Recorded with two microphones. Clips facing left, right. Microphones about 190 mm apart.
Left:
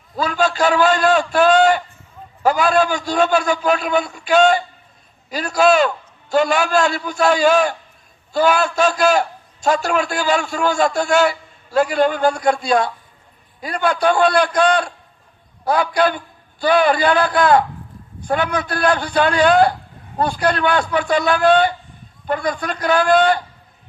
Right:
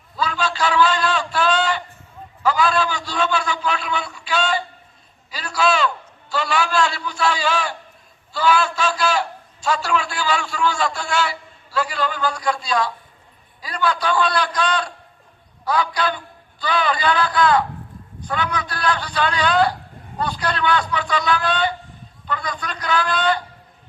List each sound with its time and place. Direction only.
0.2 s a man's voice: 45° left (ahead or behind)